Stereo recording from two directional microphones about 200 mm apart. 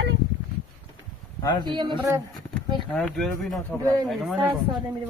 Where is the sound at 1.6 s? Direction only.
25° right (ahead or behind).